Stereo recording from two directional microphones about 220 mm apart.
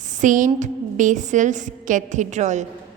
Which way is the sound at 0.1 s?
35° right (ahead or behind).